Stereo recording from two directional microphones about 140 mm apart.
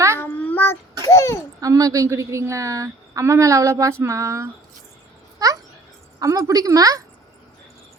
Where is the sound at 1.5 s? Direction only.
25° right (ahead or behind).